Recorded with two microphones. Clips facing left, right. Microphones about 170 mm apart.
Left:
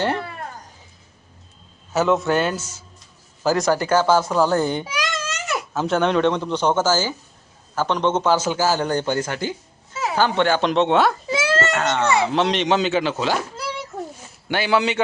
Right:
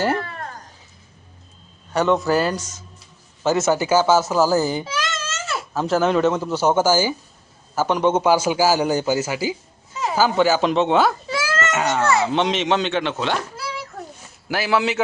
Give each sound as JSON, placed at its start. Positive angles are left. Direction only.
{"t": 0.0, "sound": "cat", "side_deg": -5}
{"t": 1.9, "sound": "speech", "side_deg": 0}
{"t": 4.9, "sound": "baby cry", "side_deg": 15}
{"t": 5.7, "sound": "a man's voice", "side_deg": 0}
{"t": 11.3, "sound": "baby cry", "side_deg": 25}
{"t": 11.7, "sound": "a man's voice", "side_deg": -5}
{"t": 14.4, "sound": "speech", "side_deg": 0}